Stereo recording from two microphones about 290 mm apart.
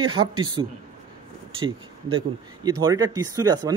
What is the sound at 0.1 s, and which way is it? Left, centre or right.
Speech, right.